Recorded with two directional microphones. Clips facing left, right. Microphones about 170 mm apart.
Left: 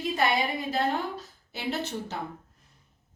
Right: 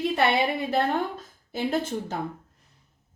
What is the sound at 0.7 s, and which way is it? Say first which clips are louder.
A woman's voice: right 3 dB; 50° right (ahead or behind).